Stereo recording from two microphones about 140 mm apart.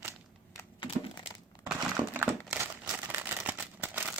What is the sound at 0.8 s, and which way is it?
Crumpling, 35° left (ahead or behind).